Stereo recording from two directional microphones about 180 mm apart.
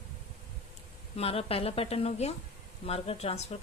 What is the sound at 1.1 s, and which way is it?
Speech, 35° left (ahead or behind).